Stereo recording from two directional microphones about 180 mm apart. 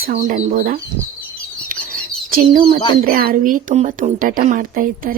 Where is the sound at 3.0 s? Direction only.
50° right (ahead or behind).